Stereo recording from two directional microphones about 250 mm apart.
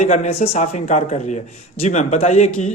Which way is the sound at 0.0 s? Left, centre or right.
Left.